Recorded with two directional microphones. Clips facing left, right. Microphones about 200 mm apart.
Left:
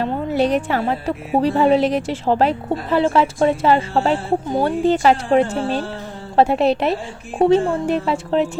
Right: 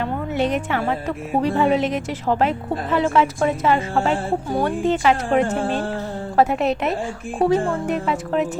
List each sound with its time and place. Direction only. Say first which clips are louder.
0.0 s a woman's voice: left 3 dB; 35° left (ahead or behind)
4.8 s a woman's voice: left 4 dB; 35° left (ahead or behind)